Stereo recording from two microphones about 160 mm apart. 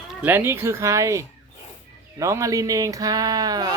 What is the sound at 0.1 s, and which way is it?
Speech, 10° right (ahead or behind).